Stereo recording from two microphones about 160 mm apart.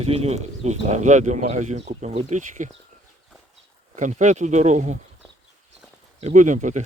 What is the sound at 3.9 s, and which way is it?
Speech, 50° right (ahead or behind).